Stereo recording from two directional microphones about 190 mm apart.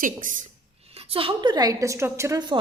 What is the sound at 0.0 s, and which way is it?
Speech, 45° right (ahead or behind).